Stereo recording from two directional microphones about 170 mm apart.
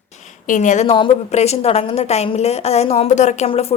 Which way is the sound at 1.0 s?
35° left (ahead or behind).